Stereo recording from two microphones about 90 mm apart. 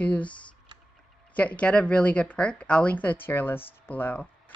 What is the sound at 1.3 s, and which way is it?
Speech, 15° left (ahead or behind).